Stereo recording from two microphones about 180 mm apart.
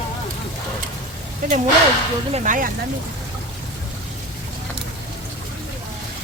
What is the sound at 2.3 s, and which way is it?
Speech, 45° right (ahead or behind).